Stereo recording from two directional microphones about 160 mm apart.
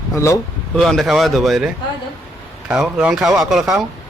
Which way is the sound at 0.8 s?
Centre (ahead or behind).